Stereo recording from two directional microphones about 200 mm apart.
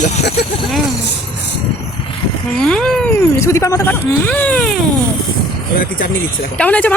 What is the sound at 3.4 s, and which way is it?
Speech, 15° left (ahead or behind).